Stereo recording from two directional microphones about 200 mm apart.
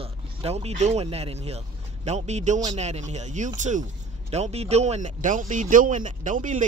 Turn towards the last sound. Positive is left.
turn(degrees=-40)  # may be behind; listen again after turning